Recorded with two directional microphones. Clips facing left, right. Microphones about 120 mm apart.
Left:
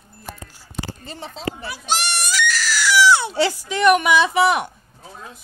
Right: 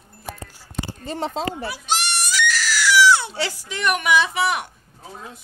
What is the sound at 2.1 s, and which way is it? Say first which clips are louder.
Screaming: even; 50° left (ahead or behind).